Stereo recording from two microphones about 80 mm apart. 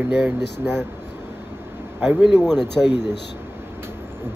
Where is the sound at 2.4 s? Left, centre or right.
Centre.